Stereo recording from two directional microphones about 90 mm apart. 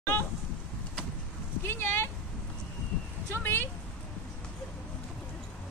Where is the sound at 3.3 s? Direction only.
25° left (ahead or behind).